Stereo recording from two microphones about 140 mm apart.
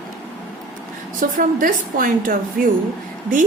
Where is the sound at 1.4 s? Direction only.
75° right (ahead or behind); by 2.4 s 90° right.